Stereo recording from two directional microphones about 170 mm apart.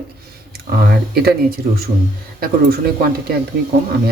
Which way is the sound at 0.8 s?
65° right (ahead or behind).